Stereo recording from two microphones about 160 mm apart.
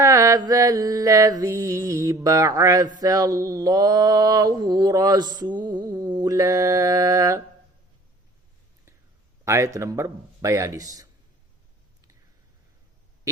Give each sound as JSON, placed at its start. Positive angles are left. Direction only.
{"t": 0.0, "sound": "mantra", "side_deg": -20}
{"t": 9.4, "sound": "mantra", "side_deg": -15}